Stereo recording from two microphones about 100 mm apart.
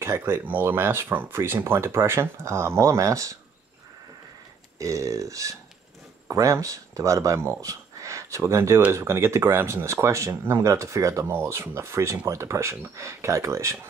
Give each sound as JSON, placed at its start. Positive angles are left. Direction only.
{"t": 0.0, "sound": "speech", "side_deg": -25}
{"t": 4.7, "sound": "speech", "side_deg": -35}